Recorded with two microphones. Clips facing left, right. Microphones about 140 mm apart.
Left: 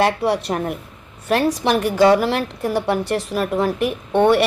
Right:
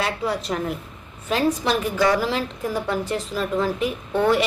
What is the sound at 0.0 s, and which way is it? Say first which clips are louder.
Speech: left 7 dB; 65° left (ahead or behind).